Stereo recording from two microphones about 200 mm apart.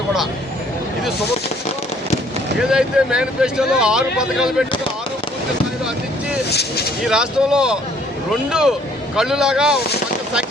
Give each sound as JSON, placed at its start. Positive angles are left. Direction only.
{"t": 2.6, "sound": "speech", "side_deg": -5}
{"t": 6.5, "sound": "speech", "side_deg": 55}
{"t": 7.0, "sound": "speech", "side_deg": -5}